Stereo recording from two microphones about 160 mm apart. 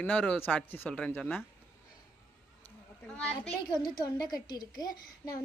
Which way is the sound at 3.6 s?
25° left (ahead or behind).